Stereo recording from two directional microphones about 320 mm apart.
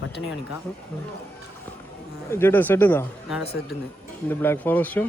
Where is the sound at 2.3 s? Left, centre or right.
Centre.